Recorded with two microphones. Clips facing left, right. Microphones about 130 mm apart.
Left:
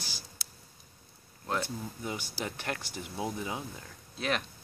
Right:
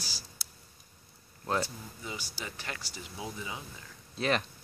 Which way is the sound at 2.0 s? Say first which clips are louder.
Left 2 dB; 55° left (ahead or behind).